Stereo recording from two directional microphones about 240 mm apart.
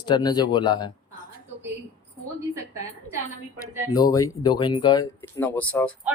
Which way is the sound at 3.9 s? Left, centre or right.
Centre.